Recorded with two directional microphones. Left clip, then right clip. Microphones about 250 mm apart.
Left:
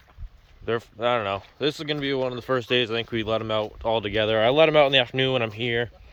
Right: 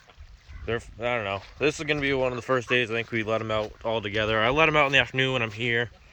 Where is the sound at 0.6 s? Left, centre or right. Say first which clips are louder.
Left 4 dB; centre.